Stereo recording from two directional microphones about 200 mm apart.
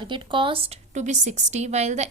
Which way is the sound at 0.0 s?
25° right (ahead or behind).